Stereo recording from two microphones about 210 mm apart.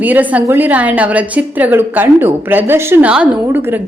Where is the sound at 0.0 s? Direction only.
10° right (ahead or behind).